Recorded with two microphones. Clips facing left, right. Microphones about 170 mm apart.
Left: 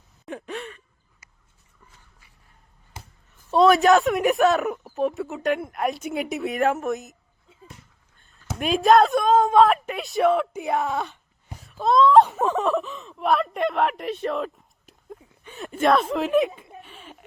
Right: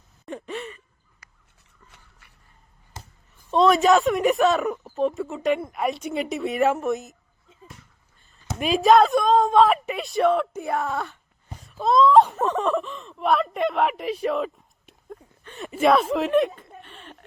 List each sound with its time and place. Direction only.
0.3 s sigh: centre (ahead or behind)
1.9 s a sound: 70° right (ahead or behind)
3.5 s speech: centre (ahead or behind)
8.2 s speech: centre (ahead or behind)
10.8 s speech: 20° left (ahead or behind)
11.1 s a sound: centre (ahead or behind)